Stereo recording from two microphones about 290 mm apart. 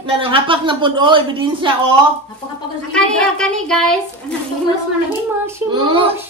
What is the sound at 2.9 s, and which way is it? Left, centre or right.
A woman's voice, centre.